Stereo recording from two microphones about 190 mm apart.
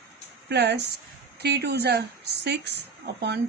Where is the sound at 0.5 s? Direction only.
60° right (ahead or behind).